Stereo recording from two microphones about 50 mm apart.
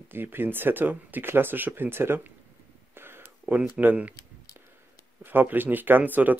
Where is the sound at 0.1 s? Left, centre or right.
Right.